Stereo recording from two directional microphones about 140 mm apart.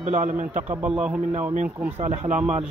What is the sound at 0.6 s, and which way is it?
Speech, 10° right (ahead or behind).